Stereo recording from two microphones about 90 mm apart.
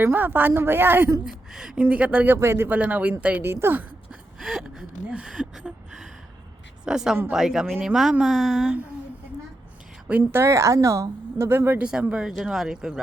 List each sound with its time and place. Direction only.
0.0 s a woman's voice: 20° right (ahead or behind)
1.2 s a woman's voice: 5° right (ahead or behind); by 2.7 s 25° right (ahead or behind)
2.7 s speech: 15° right (ahead or behind)
3.4 s a woman's voice: 25° right (ahead or behind)
4.1 s gasp: 5° right (ahead or behind)
6.8 s speech: 5° right (ahead or behind)
10.1 s a woman's voice: 20° right (ahead or behind)
10.4 s speech: 35° right (ahead or behind)
11.8 s speech: 10° right (ahead or behind)